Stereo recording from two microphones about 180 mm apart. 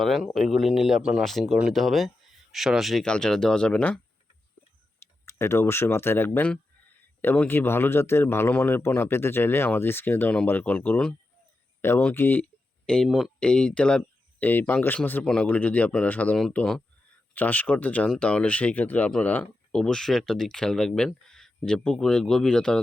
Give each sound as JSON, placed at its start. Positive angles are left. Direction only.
{"t": 0.0, "sound": "speech", "side_deg": 0}
{"t": 5.2, "sound": "speech", "side_deg": 15}